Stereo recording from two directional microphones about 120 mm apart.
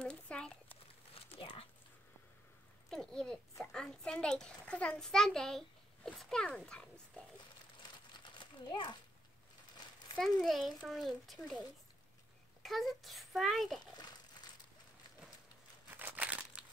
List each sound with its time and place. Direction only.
0.0 s a sound: 5° left (ahead or behind)
1.1 s a sound: 50° left (ahead or behind)
2.9 s a child's voice: 5° left (ahead or behind)
7.8 s crumpling: 40° left (ahead or behind)
10.4 s a child's voice: centre (ahead or behind)
12.6 s a child's voice: centre (ahead or behind)
13.9 s crumpling: 35° left (ahead or behind)
15.9 s crumpling: 15° right (ahead or behind)